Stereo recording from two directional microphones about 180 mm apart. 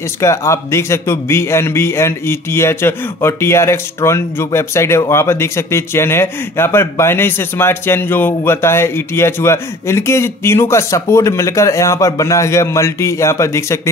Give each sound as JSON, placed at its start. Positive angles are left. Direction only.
{"t": 0.2, "sound": "a man's voice", "side_deg": 15}